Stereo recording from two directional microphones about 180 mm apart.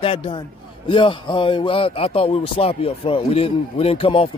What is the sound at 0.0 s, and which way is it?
Speech, 30° left (ahead or behind).